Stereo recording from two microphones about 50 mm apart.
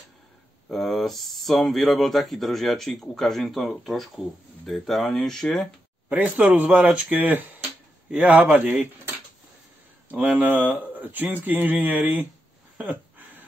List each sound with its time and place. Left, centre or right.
0.7 s speech: centre
6.0 s speech: right
10.1 s speech: right